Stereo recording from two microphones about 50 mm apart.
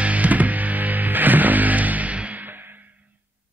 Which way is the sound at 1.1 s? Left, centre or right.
Right.